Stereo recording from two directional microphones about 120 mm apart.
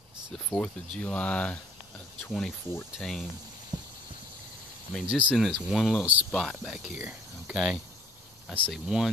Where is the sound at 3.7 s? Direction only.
35° right (ahead or behind).